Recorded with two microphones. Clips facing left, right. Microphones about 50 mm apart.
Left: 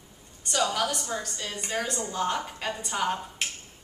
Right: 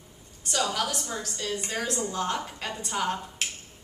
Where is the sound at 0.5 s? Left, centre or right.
Centre.